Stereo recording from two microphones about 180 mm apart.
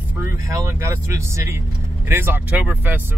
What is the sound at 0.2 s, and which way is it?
Speech, 15° right (ahead or behind).